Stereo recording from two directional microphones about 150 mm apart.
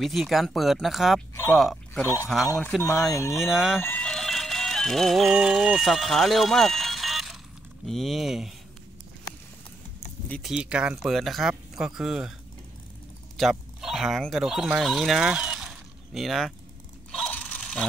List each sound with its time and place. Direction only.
0.0 s speech: centre (ahead or behind)
2.0 s speech: 15° left (ahead or behind)
3.3 s speech: centre (ahead or behind)
3.8 s music: 10° left (ahead or behind)
7.8 s speech: centre (ahead or behind)
10.4 s speech: 5° right (ahead or behind)
13.4 s speech: centre (ahead or behind)
17.2 s a sound: 10° left (ahead or behind)